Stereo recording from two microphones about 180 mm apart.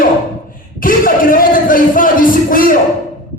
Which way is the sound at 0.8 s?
50° left (ahead or behind).